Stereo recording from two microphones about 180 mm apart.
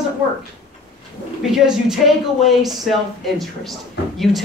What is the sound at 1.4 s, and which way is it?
Speech, centre (ahead or behind).